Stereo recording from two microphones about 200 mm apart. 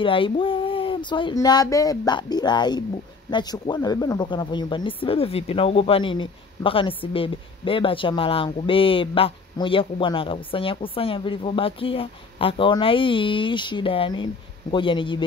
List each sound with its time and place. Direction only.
0.0 s a man's voice: 25° left (ahead or behind)